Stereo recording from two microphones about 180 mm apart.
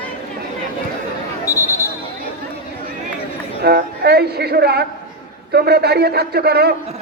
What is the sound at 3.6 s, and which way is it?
Speech, 60° right (ahead or behind).